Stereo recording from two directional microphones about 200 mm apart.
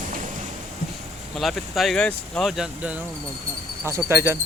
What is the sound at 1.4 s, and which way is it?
Speech, centre (ahead or behind).